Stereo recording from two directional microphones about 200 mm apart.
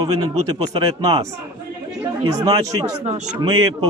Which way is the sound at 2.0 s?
15° right (ahead or behind).